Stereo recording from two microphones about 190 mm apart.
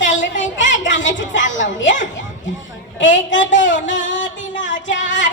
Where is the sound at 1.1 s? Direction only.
75° left (ahead or behind).